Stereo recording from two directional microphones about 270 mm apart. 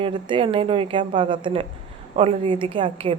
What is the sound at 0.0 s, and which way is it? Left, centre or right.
A woman's voice, centre.